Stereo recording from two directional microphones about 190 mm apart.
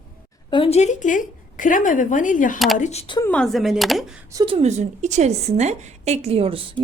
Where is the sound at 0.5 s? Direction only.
30° left (ahead or behind).